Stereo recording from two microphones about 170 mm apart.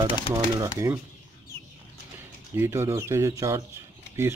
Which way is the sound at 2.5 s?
15° right (ahead or behind).